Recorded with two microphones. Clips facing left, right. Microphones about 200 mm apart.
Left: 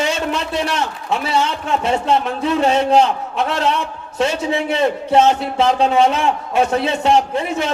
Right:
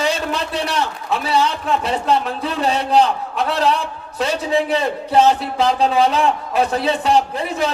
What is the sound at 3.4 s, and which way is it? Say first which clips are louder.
A man's voice: right 1 dB; 35° right (ahead or behind).